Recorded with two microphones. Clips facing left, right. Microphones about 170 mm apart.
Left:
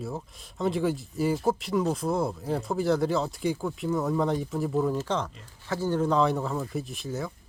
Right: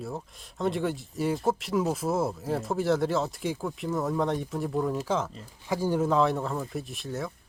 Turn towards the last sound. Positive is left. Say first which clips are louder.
# left 1 dB
turn(degrees=0)  # may be behind; listen again after turning